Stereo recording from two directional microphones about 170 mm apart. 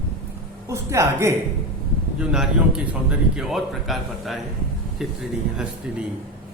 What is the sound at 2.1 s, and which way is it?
A man's voice, 5° right (ahead or behind).